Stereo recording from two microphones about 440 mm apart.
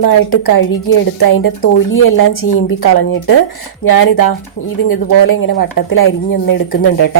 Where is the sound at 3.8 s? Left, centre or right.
Left.